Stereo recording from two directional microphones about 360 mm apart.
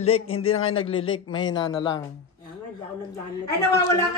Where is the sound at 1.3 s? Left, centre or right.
Centre.